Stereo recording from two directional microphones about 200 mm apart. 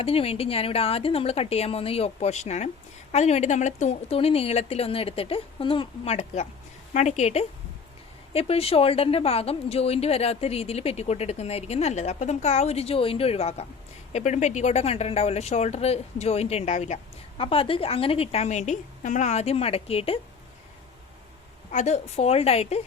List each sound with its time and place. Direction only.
0.0 s a woman's voice: 30° left (ahead or behind)
21.7 s speech: 35° left (ahead or behind)